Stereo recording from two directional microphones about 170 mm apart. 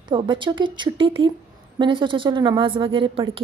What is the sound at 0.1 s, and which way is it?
A woman's voice, 30° right (ahead or behind).